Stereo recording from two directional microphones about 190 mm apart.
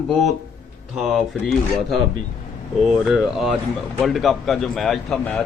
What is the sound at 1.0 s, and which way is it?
Speech, centre (ahead or behind).